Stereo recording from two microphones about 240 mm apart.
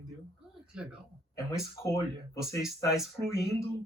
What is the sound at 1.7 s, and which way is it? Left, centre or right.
Speech, centre.